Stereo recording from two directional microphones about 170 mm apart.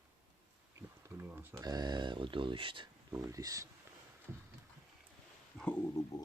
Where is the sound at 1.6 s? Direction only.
25° right (ahead or behind).